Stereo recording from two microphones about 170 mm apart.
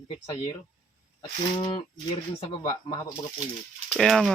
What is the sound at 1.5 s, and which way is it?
Speech, 30° left (ahead or behind).